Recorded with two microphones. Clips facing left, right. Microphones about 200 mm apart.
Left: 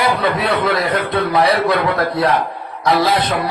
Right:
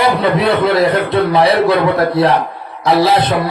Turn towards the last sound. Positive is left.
turn(degrees=-25)  # may be behind; listen again after turning